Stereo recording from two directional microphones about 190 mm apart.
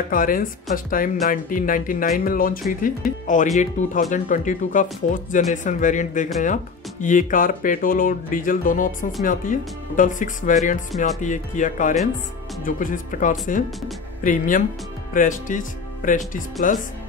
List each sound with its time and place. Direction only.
0.1 s speech: 45° left (ahead or behind)
16.6 s speech: 45° left (ahead or behind)